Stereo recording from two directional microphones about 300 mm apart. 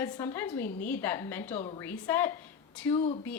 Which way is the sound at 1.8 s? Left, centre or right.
Centre.